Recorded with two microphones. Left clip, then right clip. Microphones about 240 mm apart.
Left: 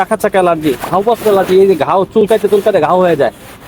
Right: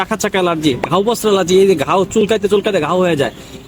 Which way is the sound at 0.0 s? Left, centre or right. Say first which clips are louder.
Left 5 dB; right.